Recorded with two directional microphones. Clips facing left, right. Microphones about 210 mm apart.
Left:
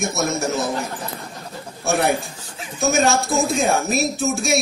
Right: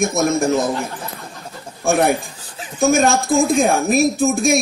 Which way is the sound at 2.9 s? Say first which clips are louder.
Right 3 dB; 50° right (ahead or behind).